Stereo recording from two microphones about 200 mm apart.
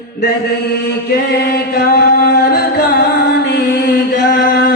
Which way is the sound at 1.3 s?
50° left (ahead or behind).